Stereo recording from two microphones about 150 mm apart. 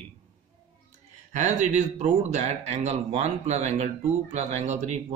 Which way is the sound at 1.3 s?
50° right (ahead or behind).